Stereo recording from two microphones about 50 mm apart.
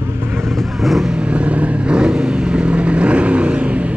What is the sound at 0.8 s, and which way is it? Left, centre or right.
Vehicle, centre.